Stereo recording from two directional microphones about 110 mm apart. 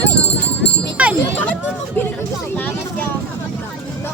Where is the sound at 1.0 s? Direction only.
10° right (ahead or behind).